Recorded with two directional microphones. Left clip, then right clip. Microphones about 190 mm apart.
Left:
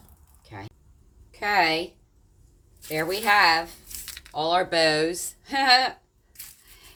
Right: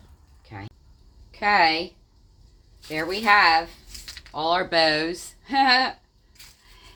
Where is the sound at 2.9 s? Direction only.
35° right (ahead or behind).